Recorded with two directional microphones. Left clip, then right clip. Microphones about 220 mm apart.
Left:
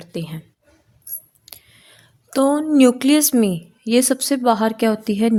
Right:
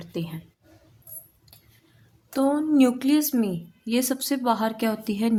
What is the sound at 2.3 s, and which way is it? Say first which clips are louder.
A woman's voice: left 6 dB; 40° left (ahead or behind).